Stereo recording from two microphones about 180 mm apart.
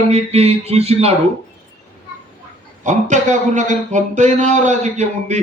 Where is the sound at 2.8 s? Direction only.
40° right (ahead or behind).